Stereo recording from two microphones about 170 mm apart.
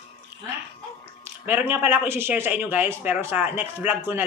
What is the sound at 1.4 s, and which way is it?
A man's voice, 10° right (ahead or behind).